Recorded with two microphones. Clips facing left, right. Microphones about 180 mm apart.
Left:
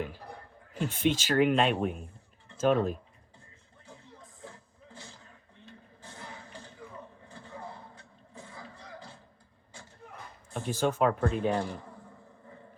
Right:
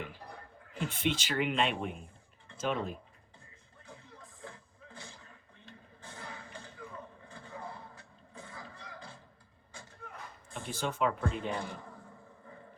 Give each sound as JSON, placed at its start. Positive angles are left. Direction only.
{"t": 0.8, "sound": "speech", "side_deg": 40}
{"t": 10.5, "sound": "speech", "side_deg": 45}